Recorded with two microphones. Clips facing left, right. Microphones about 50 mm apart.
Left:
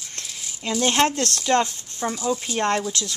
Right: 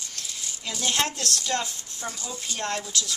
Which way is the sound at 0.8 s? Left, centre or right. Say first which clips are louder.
Left 7 dB; left.